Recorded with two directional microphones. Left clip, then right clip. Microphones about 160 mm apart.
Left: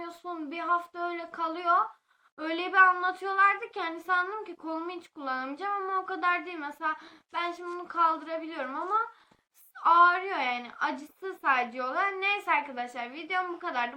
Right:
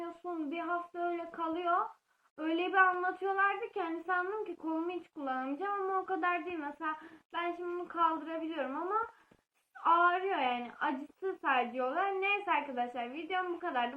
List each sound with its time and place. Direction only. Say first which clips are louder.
0.3 s a woman's voice: left 7 dB; 25° left (ahead or behind)